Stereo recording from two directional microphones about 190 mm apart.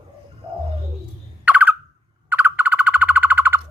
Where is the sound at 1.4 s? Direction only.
10° right (ahead or behind).